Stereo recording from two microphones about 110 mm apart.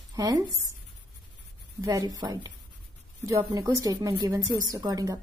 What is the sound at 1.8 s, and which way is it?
A woman's voice, 35° right (ahead or behind).